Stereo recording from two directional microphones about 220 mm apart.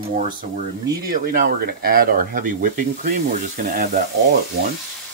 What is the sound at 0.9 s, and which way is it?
Speech, 40° right (ahead or behind).